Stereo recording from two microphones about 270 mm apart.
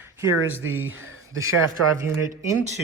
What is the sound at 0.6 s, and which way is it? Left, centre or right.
Speech, right.